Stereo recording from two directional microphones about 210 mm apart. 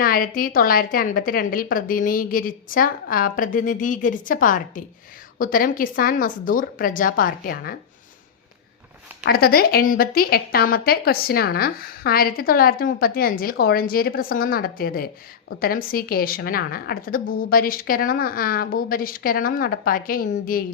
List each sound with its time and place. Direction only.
0.0 s a woman's voice: 45° left (ahead or behind)
9.2 s a woman's voice: 45° left (ahead or behind)